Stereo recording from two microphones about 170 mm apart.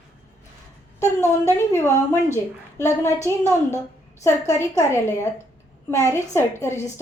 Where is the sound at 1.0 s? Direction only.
15° left (ahead or behind).